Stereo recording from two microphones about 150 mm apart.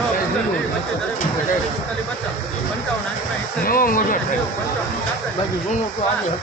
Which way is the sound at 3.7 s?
70° left (ahead or behind).